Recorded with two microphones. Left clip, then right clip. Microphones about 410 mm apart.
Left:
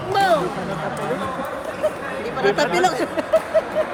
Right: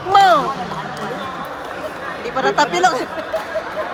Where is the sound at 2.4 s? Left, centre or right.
Centre.